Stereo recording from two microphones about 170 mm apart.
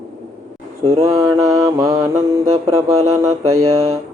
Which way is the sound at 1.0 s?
15° right (ahead or behind).